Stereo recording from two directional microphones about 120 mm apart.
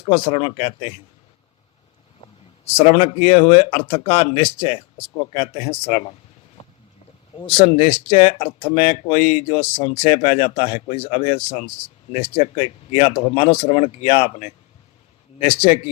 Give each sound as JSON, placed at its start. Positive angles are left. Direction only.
{"t": 0.0, "sound": "speech", "side_deg": 40}
{"t": 2.7, "sound": "speech", "side_deg": 55}
{"t": 6.6, "sound": "boat", "side_deg": 60}
{"t": 7.3, "sound": "speech", "side_deg": 45}